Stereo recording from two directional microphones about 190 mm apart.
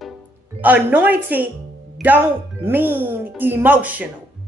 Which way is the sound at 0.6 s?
10° right (ahead or behind).